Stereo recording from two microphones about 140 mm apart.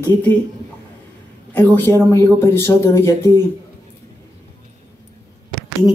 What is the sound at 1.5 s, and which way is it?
Speech, 15° left (ahead or behind).